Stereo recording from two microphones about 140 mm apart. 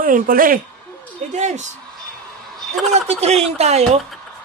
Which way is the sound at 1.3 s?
55° right (ahead or behind).